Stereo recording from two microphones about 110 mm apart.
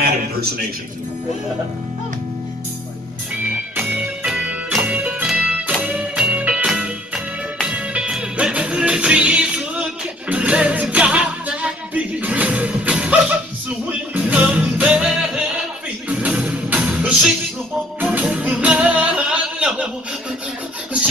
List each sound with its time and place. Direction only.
3.7 s music: 15° right (ahead or behind)